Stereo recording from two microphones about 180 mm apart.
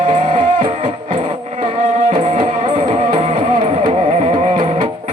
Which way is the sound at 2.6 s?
25° right (ahead or behind).